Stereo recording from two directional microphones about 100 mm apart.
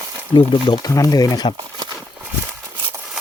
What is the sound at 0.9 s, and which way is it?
Speech, 35° left (ahead or behind).